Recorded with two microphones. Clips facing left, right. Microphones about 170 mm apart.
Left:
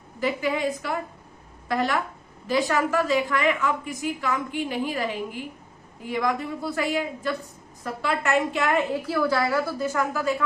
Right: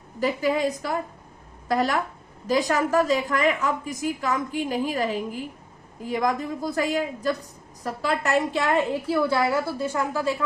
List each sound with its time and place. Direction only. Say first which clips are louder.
0.2 s a woman's voice: right 2 dB; 40° right (ahead or behind)